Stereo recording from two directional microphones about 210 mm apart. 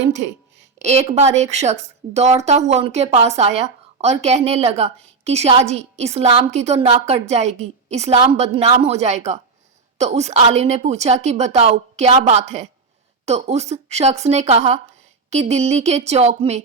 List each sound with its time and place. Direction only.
0.0 s a woman's voice: 35° right (ahead or behind)